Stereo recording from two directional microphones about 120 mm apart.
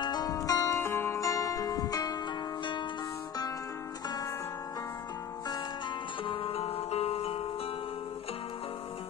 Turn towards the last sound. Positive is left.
turn(degrees=50)  # may be behind; listen again after turning